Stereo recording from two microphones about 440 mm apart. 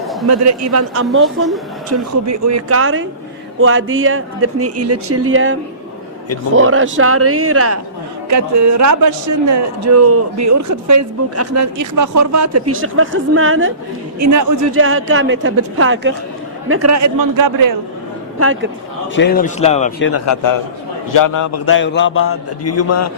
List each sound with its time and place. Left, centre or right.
0.3 s a man's voice: right
1.4 s speech: centre
1.9 s a man's voice: right
14.2 s a man's voice: right
14.8 s a man's voice: right
18.3 s speech: right
19.1 s speech: left
20.1 s a man's voice: left
21.7 s a man's voice: left